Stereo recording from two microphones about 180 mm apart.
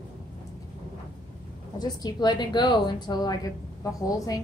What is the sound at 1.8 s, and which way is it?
A woman's voice, 20° left (ahead or behind).